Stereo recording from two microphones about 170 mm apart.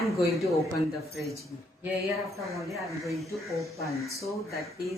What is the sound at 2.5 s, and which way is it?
Speech, centre (ahead or behind).